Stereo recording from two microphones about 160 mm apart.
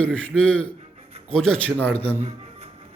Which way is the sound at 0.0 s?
10° left (ahead or behind).